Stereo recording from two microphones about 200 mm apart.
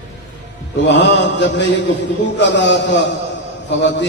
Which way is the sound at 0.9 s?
60° left (ahead or behind).